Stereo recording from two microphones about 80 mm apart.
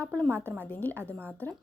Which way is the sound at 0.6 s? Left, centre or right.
Left.